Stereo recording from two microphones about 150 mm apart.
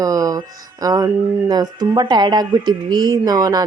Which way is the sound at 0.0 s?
25° right (ahead or behind).